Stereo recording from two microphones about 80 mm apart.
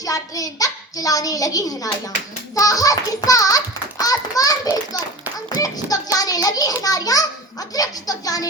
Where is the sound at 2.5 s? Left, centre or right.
Left.